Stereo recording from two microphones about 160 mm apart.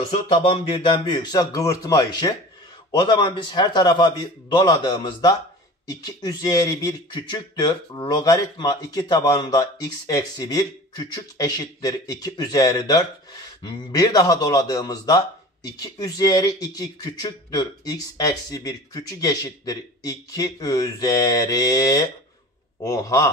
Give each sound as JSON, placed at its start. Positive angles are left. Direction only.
{"t": 0.1, "sound": "speech", "side_deg": 35}